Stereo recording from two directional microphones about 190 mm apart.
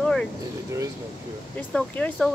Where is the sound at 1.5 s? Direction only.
5° left (ahead or behind).